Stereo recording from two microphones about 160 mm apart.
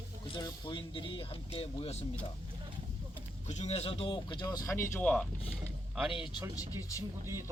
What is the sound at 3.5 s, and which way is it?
Speech, 40° left (ahead or behind).